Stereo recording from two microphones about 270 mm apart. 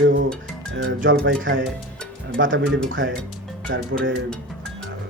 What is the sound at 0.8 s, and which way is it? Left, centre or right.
Speech, right.